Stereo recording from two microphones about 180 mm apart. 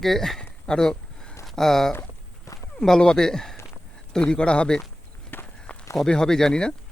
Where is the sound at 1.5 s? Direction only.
Centre (ahead or behind).